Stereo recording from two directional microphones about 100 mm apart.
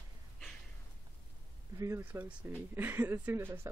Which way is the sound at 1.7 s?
30° right (ahead or behind).